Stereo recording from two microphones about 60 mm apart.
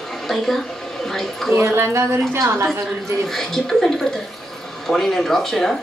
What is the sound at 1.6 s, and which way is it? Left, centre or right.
Speech, right.